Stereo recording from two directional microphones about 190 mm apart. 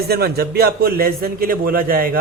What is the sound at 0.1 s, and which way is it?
A man's voice, 55° right (ahead or behind).